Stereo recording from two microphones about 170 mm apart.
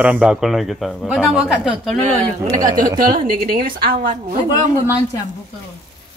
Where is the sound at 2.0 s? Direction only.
40° right (ahead or behind).